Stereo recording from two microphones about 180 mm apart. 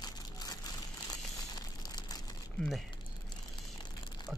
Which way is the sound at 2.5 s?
Centre (ahead or behind).